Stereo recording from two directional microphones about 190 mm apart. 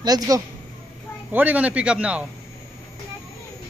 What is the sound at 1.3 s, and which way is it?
Speech, 10° right (ahead or behind).